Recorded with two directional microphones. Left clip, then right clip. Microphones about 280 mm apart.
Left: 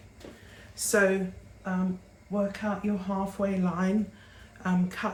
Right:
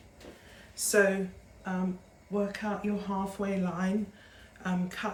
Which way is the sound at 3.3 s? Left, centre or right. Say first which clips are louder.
Left 3 dB; centre.